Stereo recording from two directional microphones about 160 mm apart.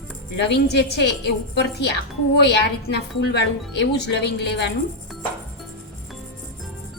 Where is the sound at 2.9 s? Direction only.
90° left.